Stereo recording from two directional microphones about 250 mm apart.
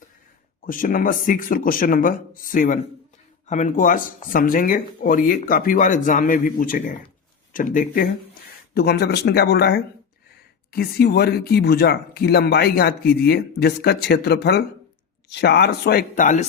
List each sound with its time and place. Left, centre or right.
0.6 s speech: left